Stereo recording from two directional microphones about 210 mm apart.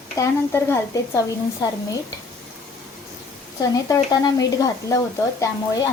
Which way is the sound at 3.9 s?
15° left (ahead or behind).